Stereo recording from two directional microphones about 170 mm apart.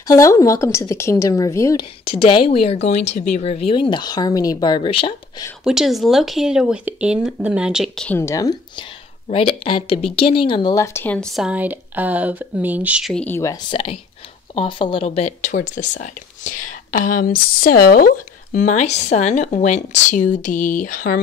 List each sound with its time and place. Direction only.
0.1 s a woman's voice: 20° left (ahead or behind)
2.0 s a woman's voice: 30° left (ahead or behind)
5.6 s speech: centre (ahead or behind)
8.2 s speech: 20° left (ahead or behind)
9.3 s a woman's voice: 30° left (ahead or behind); by 13.1 s 5° right (ahead or behind)
13.1 s a woman's voice: 10° left (ahead or behind)
13.7 s a woman's voice: 30° left (ahead or behind); by 21.2 s 55° left (ahead or behind)